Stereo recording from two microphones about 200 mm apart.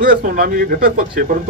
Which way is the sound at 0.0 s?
45° right (ahead or behind).